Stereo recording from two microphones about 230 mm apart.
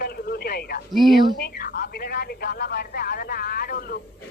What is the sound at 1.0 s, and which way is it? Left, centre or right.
Speech, centre.